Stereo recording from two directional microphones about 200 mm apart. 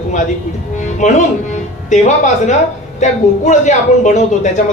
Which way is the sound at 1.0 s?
35° left (ahead or behind).